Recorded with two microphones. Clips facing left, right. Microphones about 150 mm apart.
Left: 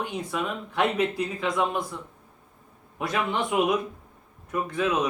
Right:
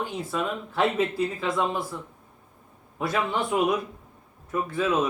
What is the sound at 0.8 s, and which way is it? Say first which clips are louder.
Speech: right 1 dB; 15° left (ahead or behind).